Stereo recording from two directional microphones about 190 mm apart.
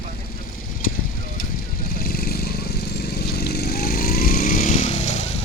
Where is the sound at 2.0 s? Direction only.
50° left (ahead or behind); by 5.1 s 35° left (ahead or behind).